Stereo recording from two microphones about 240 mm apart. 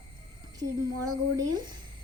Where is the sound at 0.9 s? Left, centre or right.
Right.